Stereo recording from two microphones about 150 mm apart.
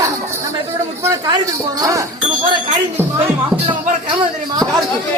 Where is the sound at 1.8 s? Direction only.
20° right (ahead or behind).